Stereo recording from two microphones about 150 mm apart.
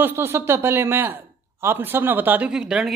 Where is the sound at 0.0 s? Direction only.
15° right (ahead or behind).